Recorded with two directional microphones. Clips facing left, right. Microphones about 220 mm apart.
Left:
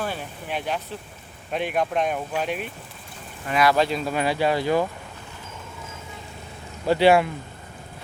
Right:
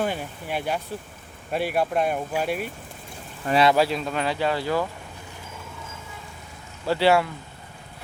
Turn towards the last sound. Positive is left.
turn(degrees=15)  # may be behind; listen again after turning